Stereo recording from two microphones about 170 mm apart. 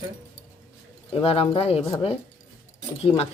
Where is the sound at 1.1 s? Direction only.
35° left (ahead or behind).